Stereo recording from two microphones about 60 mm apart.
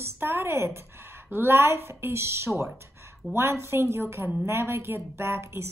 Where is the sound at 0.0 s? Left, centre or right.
Right.